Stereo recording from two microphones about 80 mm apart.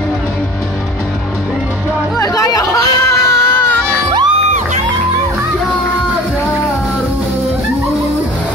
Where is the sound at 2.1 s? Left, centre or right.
Left.